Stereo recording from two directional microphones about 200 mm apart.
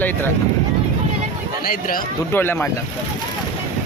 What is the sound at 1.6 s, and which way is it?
Speech, 45° left (ahead or behind).